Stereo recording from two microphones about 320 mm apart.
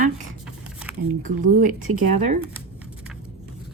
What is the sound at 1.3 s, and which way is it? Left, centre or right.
Speech, right.